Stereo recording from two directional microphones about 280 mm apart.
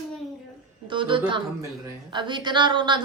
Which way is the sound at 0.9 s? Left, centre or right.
Centre.